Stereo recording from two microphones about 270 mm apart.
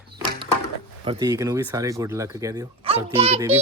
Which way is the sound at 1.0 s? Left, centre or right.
Centre.